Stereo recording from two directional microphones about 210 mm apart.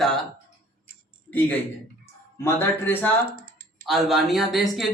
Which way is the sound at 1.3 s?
10° left (ahead or behind).